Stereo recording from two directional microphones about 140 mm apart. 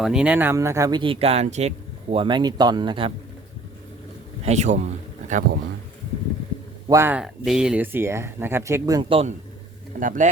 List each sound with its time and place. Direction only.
0.0 s speech: 5° right (ahead or behind); by 2.2 s 50° right (ahead or behind)
2.2 s speech: 30° right (ahead or behind)
4.4 s a man's voice: 55° right (ahead or behind)
5.3 s speech: 90° right
6.8 s speech: 20° right (ahead or behind)
7.2 s speech: 5° right (ahead or behind); by 9.0 s 20° right (ahead or behind)
9.0 s speech: 40° right (ahead or behind)
10.0 s speech: 70° right (ahead or behind)